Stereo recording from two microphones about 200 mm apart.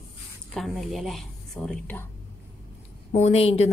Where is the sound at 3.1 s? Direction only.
30° left (ahead or behind).